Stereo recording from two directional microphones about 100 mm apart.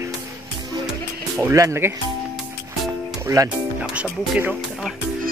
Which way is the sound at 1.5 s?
30° right (ahead or behind).